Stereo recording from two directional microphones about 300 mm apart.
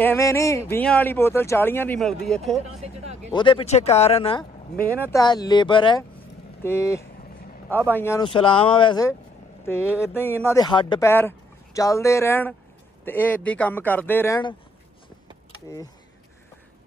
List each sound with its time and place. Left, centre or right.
0.0 s speech: centre
3.3 s speech: centre
15.7 s speech: centre